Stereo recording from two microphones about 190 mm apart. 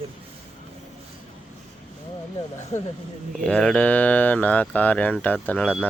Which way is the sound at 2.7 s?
40° left (ahead or behind).